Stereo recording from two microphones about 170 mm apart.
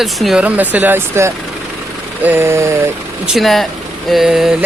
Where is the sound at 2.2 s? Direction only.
15° right (ahead or behind).